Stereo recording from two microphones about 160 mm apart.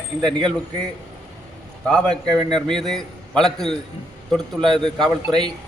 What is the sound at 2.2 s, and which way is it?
Speech, 25° right (ahead or behind).